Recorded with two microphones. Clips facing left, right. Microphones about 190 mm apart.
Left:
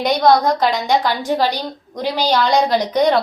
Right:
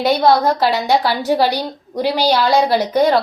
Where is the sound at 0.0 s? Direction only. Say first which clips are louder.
Right 1 dB; 5° right (ahead or behind).